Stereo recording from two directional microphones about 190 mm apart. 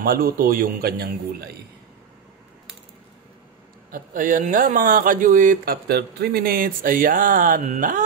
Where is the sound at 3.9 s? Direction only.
45° right (ahead or behind).